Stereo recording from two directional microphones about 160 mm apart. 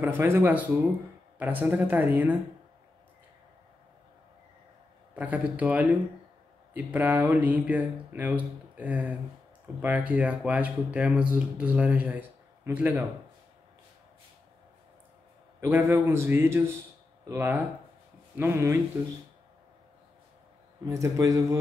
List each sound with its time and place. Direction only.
0.0 s speech: 15° right (ahead or behind)
5.1 s speech: 10° right (ahead or behind)
15.6 s speech: 15° right (ahead or behind)
20.8 s speech: 20° right (ahead or behind)